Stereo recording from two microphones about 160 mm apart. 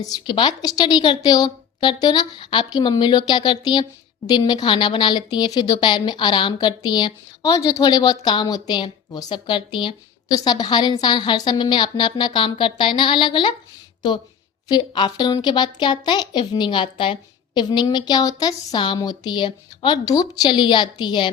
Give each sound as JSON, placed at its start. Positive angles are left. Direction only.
{"t": 0.0, "sound": "a woman's voice", "side_deg": 25}